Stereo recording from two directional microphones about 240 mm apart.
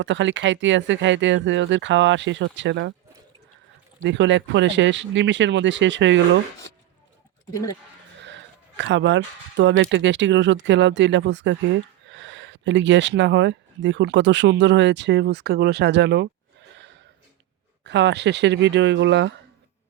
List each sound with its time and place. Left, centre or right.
0.0 s speech: right
4.0 s speech: right
8.8 s speech: right